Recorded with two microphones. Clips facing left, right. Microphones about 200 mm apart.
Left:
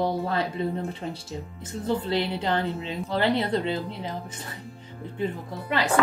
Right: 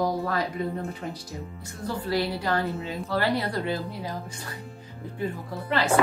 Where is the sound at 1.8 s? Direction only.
25° left (ahead or behind).